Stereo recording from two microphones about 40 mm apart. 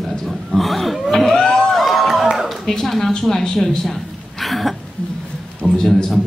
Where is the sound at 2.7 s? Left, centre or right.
Centre.